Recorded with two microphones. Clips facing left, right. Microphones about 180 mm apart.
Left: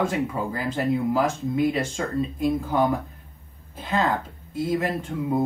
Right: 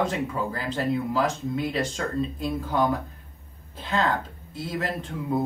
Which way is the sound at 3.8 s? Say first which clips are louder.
Left 1 dB; 10° left (ahead or behind).